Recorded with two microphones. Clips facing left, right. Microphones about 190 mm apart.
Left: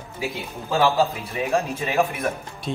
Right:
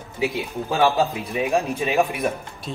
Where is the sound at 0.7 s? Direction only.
15° right (ahead or behind).